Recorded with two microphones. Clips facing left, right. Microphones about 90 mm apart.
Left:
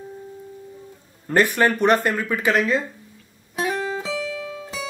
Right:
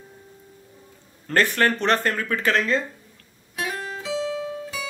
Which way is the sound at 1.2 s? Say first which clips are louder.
Left 2 dB; 10° left (ahead or behind).